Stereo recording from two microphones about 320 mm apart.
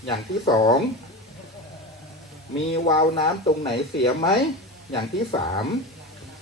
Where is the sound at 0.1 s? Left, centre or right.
Centre.